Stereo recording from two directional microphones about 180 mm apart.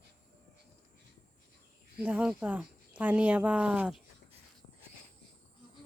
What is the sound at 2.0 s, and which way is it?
Speech, 5° right (ahead or behind).